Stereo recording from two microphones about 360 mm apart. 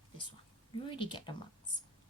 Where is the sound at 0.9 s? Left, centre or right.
Centre.